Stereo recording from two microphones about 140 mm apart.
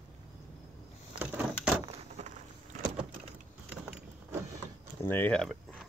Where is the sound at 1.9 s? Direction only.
55° right (ahead or behind).